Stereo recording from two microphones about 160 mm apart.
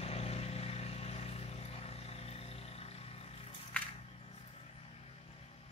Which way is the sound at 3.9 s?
40° left (ahead or behind).